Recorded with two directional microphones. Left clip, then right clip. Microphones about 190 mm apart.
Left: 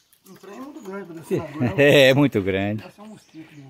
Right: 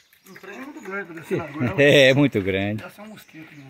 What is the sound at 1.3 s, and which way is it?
Speech, 10° left (ahead or behind).